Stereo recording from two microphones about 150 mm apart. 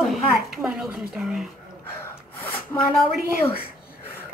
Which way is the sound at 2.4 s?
10° left (ahead or behind).